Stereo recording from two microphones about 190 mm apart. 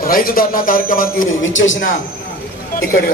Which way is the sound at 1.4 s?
90° left.